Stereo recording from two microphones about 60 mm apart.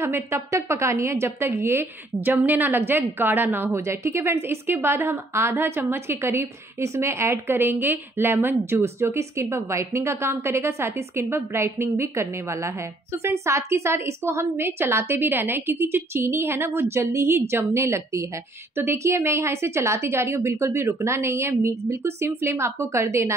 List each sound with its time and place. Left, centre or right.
0.0 s a woman's voice: right
3.7 s a woman's voice: right